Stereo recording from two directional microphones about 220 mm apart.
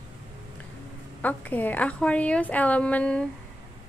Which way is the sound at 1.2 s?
5° left (ahead or behind).